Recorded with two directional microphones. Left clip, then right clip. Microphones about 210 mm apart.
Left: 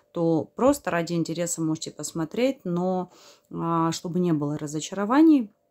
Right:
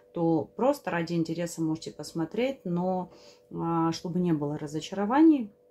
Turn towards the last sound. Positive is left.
turn(degrees=35)  # may be behind; listen again after turning